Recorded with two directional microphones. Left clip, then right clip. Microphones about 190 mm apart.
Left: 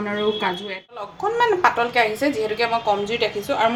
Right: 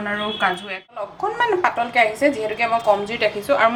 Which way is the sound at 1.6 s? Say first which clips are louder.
Even; 5° right (ahead or behind).